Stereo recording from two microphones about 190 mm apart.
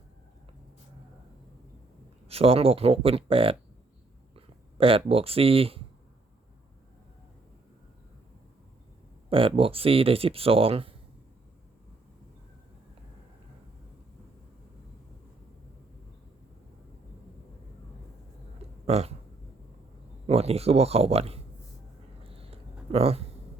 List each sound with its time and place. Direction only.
2.2 s speech: 30° right (ahead or behind)
9.3 s speech: 30° right (ahead or behind)
18.9 s speech: 35° right (ahead or behind)
20.2 s speech: 30° right (ahead or behind)
22.2 s a sound: 30° right (ahead or behind)